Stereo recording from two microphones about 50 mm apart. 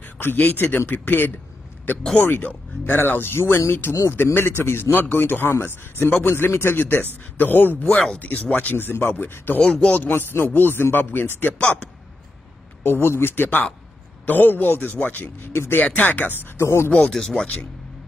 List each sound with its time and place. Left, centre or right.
0.2 s a man's voice: left
7.9 s speech: centre
8.2 s a man's voice: left
8.7 s a man's voice: left
9.6 s a man's voice: left
9.9 s a man's voice: left
11.5 s a man's voice: left
12.8 s a man's voice: left
16.5 s speech: left
17.1 s speech: centre